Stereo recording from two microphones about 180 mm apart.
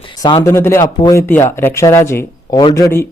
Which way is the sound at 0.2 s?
20° left (ahead or behind).